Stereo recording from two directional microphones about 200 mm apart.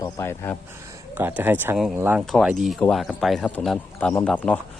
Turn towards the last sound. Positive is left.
turn(degrees=5)  # may be behind; listen again after turning